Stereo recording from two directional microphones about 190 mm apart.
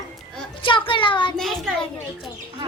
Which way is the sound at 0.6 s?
25° left (ahead or behind).